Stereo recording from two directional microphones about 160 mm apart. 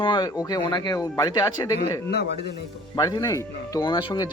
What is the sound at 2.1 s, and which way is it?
Speech, 90° left.